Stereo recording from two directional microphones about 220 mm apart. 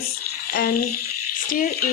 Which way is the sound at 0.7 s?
90° left.